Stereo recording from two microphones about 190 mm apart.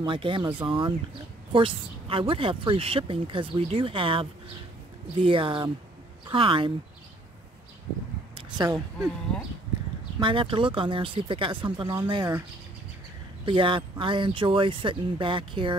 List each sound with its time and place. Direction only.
0.0 s speech: 25° right (ahead or behind)
8.4 s a sound: 20° right (ahead or behind)
10.1 s speech: 25° right (ahead or behind)
13.5 s speech: 25° right (ahead or behind)